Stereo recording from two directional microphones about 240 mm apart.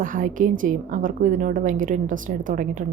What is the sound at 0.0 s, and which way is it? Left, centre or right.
A woman's voice, right.